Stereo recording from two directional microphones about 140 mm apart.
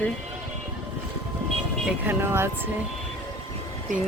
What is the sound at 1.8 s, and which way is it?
Speech, 15° right (ahead or behind).